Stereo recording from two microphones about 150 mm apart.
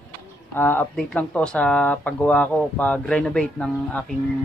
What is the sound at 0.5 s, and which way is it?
A man's voice, 15° left (ahead or behind).